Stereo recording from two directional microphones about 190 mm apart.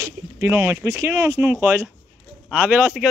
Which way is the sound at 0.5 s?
15° right (ahead or behind).